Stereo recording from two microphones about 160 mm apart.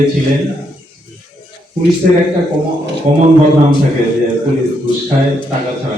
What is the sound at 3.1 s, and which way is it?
Speech, 50° right (ahead or behind).